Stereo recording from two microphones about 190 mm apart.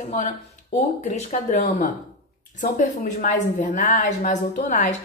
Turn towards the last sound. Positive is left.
turn(degrees=40)  # may be behind; listen again after turning